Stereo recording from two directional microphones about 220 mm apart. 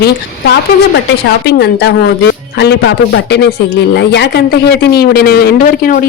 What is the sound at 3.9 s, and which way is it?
Speech, 50° left (ahead or behind).